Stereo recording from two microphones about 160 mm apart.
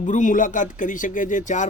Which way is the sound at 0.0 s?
50° left (ahead or behind).